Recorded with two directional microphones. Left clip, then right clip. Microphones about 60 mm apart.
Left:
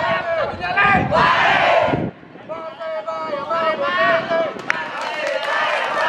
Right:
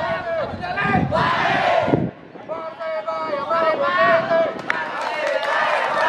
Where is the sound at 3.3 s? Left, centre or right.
Centre.